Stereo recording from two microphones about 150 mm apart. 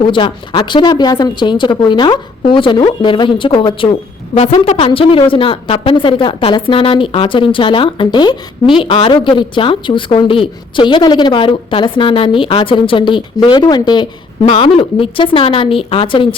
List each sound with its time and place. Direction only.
0.1 s a woman's voice: 35° left (ahead or behind)
4.4 s a woman's voice: 45° left (ahead or behind)
4.9 s a woman's voice: 35° left (ahead or behind)